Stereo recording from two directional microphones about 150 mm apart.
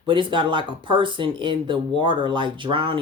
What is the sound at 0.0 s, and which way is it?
Speech, 35° right (ahead or behind).